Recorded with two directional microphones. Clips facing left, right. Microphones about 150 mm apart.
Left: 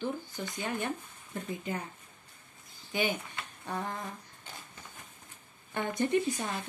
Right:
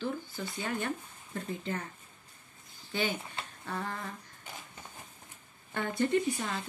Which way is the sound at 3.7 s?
20° left (ahead or behind).